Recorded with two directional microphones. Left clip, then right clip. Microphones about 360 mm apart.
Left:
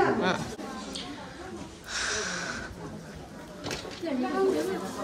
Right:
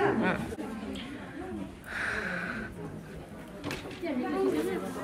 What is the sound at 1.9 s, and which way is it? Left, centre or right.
Snort, centre.